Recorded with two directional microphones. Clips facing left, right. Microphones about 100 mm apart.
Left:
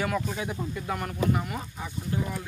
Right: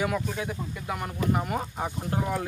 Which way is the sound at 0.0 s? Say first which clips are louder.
Right 1 dB; centre (ahead or behind).